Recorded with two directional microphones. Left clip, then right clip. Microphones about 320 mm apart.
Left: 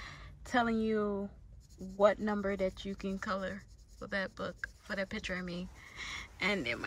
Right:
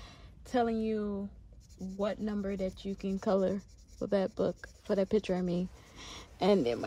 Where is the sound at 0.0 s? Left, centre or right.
Centre.